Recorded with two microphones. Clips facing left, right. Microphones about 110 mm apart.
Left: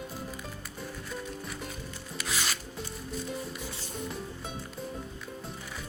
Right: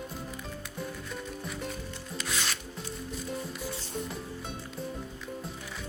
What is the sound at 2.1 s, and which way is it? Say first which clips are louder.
Music: even; 5° left (ahead or behind).